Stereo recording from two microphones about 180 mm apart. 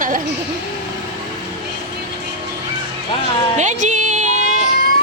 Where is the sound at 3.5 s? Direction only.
45° right (ahead or behind).